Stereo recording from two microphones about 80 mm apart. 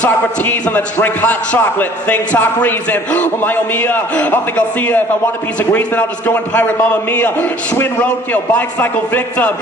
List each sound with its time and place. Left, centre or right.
0.0 s a man's voice: left